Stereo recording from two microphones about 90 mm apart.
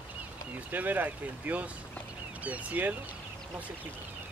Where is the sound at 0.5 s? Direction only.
20° right (ahead or behind).